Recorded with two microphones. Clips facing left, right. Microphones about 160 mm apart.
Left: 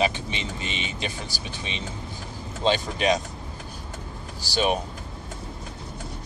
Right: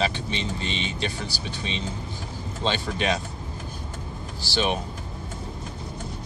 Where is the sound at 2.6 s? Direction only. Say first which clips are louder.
Left 3 dB; 10° left (ahead or behind).